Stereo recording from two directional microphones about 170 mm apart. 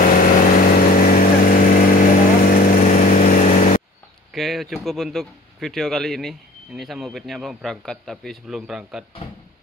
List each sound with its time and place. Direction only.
0.0 s vehicle: 55° left (ahead or behind)
4.3 s a man's voice: centre (ahead or behind)